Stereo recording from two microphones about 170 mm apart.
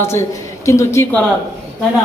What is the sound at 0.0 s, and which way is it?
Speech, 15° left (ahead or behind).